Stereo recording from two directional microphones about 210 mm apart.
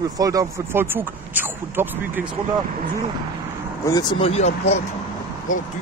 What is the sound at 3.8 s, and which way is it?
Speech, 20° left (ahead or behind).